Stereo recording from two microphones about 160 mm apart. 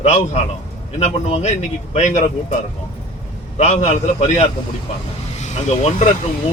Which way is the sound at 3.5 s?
45° left (ahead or behind).